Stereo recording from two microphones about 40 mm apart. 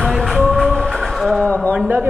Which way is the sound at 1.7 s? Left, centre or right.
Right.